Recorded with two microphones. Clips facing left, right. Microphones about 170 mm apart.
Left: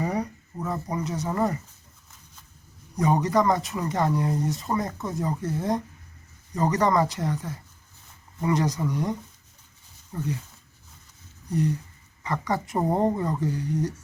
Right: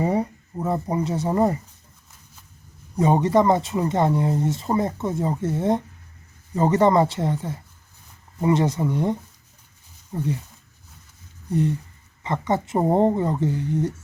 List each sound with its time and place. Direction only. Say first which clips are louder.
0.0 s speech: right 5 dB; 25° right (ahead or behind)
2.9 s speech: right 4 dB; 25° right (ahead or behind)
12.2 s speech: right 4 dB; 25° right (ahead or behind)